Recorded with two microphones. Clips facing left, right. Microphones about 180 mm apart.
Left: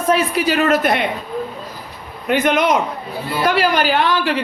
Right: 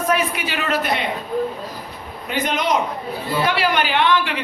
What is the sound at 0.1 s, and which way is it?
Speech, 40° left (ahead or behind).